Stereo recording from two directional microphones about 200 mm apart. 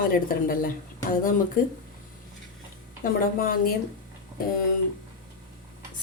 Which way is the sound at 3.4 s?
45° left (ahead or behind).